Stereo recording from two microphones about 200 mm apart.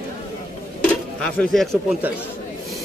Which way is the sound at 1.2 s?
Centre (ahead or behind).